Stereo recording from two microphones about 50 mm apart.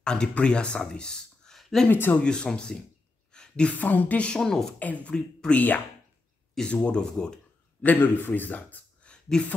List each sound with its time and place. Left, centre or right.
0.0 s speech: centre
1.6 s a sound: centre
1.9 s speech: left
2.1 s speech: centre
3.3 s a sound: centre
3.7 s a man's voice: left
4.3 s speech: centre
4.7 s a man's voice: left
6.7 s speech: left
7.8 s a man's voice: left
9.0 s a sound: left